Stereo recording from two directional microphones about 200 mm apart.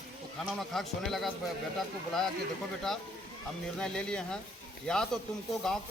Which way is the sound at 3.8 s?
5° left (ahead or behind).